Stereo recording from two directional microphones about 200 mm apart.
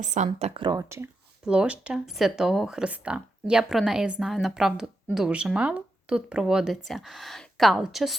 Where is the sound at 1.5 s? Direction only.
5° right (ahead or behind).